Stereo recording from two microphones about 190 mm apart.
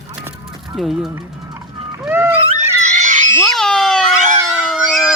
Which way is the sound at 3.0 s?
40° right (ahead or behind).